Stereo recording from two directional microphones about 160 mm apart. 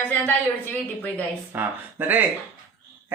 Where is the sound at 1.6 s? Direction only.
10° right (ahead or behind).